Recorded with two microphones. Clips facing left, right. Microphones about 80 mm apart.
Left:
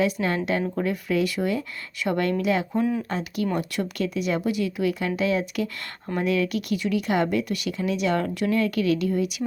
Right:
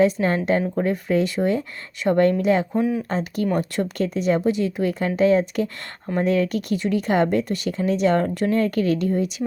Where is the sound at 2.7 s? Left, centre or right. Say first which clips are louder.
Right 2 dB; centre.